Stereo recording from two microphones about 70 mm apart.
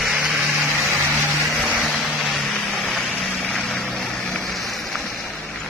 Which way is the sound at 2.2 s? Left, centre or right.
Centre.